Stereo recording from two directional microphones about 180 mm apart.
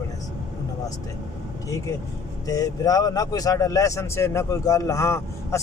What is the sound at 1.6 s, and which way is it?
Speech, 15° left (ahead or behind).